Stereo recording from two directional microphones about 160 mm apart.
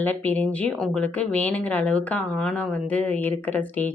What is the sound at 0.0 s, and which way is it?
Speech, 10° left (ahead or behind).